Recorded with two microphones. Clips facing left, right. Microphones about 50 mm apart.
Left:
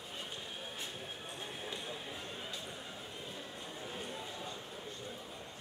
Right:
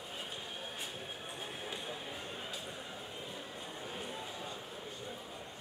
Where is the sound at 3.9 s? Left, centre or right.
Centre.